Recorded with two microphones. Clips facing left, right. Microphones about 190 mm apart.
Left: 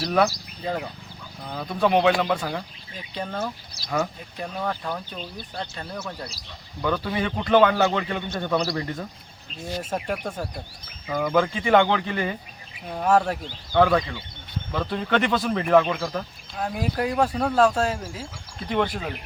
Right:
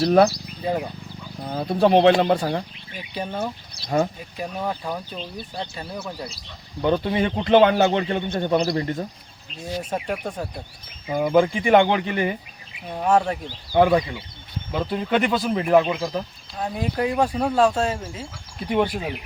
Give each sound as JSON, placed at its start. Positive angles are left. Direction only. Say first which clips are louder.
{"t": 0.6, "sound": "speech", "louder": "right 4 dB", "side_deg": -15}
{"t": 1.5, "sound": "speech", "louder": "right 4 dB", "side_deg": -35}
{"t": 3.2, "sound": "speech", "louder": "right 2 dB", "side_deg": -15}
{"t": 3.8, "sound": "speech", "louder": "right 4 dB", "side_deg": -30}
{"t": 4.4, "sound": "speech", "louder": "right 1 dB", "side_deg": -10}
{"t": 6.8, "sound": "a man's voice", "louder": "right 4 dB", "side_deg": -25}
{"t": 9.9, "sound": "speech", "louder": "even", "side_deg": -5}
{"t": 11.3, "sound": "speech", "louder": "right 3 dB", "side_deg": -10}
{"t": 12.9, "sound": "speech", "louder": "right 1 dB", "side_deg": 0}
{"t": 13.4, "sound": "speech", "louder": "right 2 dB", "side_deg": -15}
{"t": 14.8, "sound": "speech", "louder": "right 1 dB", "side_deg": -5}
{"t": 16.6, "sound": "speech", "louder": "right 1 dB", "side_deg": 0}
{"t": 18.7, "sound": "speech", "louder": "right 3 dB", "side_deg": -15}